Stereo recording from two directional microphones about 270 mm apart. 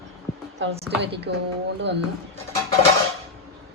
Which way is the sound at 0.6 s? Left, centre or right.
Right.